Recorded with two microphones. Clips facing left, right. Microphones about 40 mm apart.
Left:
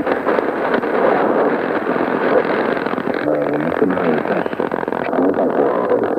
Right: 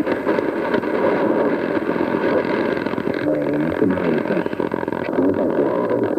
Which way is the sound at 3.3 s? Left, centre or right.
Centre.